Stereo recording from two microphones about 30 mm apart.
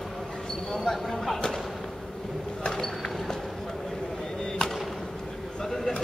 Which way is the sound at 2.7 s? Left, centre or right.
Centre.